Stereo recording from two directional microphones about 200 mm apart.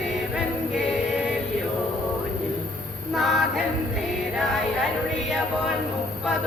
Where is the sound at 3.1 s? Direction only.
Centre (ahead or behind).